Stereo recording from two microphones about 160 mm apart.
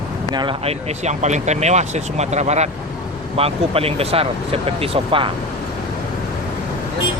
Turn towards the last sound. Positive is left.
turn(degrees=-35)  # may be behind; listen again after turning